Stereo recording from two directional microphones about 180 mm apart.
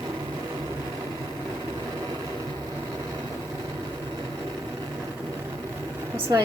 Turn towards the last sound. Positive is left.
turn(degrees=-15)  # may be behind; listen again after turning